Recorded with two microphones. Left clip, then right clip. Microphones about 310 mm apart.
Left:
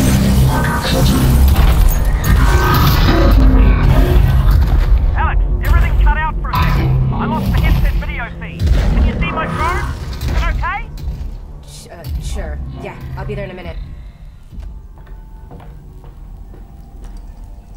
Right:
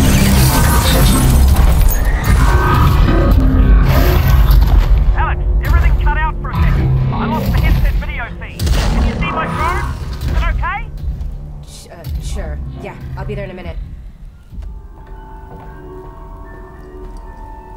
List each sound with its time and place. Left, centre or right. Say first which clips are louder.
0.6 s music: right 2 dB; centre
2.8 s music: left 2 dB; centre
3.9 s a sound: right 2 dB; centre
6.5 s music: left 4 dB; centre
7.2 s music: right 1 dB; centre
8.5 s gunshot: right 3 dB; centre
9.0 s a sound: left 1 dB; centre
11.9 s music: even; centre